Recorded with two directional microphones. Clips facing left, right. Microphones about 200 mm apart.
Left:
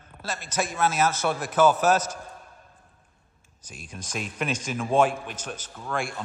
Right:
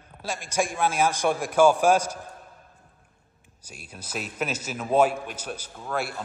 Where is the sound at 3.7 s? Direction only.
10° right (ahead or behind).